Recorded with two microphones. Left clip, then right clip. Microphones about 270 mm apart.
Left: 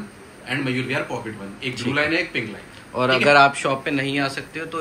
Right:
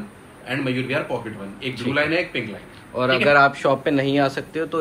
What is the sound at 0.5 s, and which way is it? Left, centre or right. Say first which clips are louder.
Speech: even; centre.